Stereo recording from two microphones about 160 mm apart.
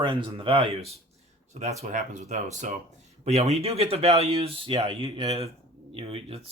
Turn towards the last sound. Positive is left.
turn(degrees=-40)  # may be behind; listen again after turning